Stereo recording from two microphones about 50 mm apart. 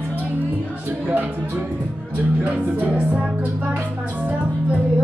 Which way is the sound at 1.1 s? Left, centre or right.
Right.